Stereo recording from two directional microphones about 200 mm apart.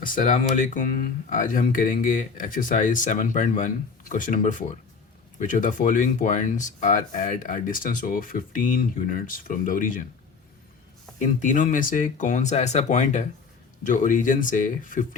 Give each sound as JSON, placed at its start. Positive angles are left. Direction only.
{"t": 0.0, "sound": "speech", "side_deg": 40}
{"t": 11.2, "sound": "speech", "side_deg": 40}